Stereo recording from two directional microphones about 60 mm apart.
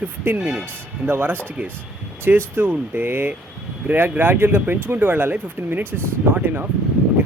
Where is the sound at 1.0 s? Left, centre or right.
Right.